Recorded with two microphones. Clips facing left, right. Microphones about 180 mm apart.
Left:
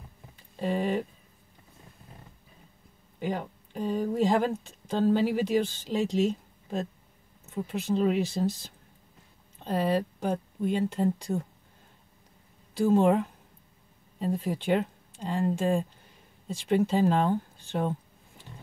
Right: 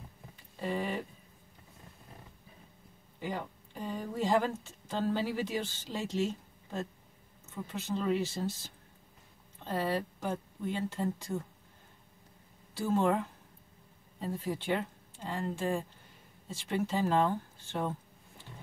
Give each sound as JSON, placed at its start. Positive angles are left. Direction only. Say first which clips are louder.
{"t": 0.6, "sound": "speech", "louder": "left 6 dB", "side_deg": 20}
{"t": 3.2, "sound": "speech", "louder": "left 6 dB", "side_deg": 20}
{"t": 12.7, "sound": "speech", "louder": "left 7 dB", "side_deg": 15}
{"t": 14.5, "sound": "speech", "louder": "left 5 dB", "side_deg": 20}